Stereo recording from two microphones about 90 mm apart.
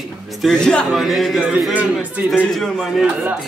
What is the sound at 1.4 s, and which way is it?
Speech, 10° right (ahead or behind).